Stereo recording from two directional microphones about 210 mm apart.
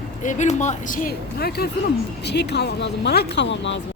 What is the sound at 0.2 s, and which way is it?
Speech, 35° left (ahead or behind).